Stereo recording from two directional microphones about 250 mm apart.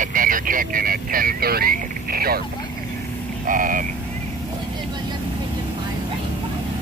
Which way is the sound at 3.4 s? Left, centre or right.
Right.